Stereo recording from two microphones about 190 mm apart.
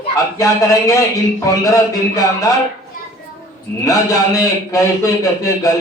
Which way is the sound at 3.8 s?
15° left (ahead or behind).